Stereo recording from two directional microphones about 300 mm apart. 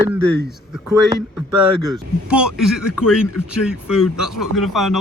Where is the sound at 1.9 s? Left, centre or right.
Centre.